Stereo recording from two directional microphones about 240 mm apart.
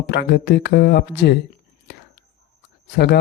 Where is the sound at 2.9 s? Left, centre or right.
Left.